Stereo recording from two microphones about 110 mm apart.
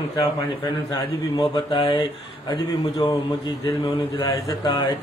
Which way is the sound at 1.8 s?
45° left (ahead or behind).